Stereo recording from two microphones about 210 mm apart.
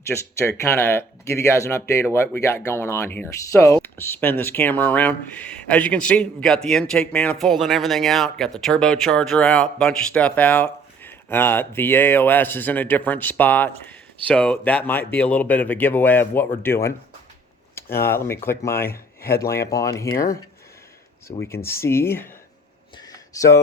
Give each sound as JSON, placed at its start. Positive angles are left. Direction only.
{"t": 0.1, "sound": "speech", "side_deg": 0}
{"t": 17.9, "sound": "speech", "side_deg": 10}
{"t": 21.2, "sound": "speech", "side_deg": 10}
{"t": 23.0, "sound": "a sound", "side_deg": 15}